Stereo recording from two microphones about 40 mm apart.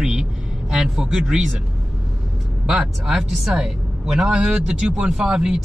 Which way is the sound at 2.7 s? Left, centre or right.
Centre.